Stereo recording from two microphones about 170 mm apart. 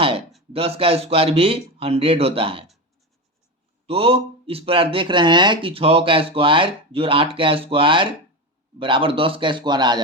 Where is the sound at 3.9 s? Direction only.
35° right (ahead or behind).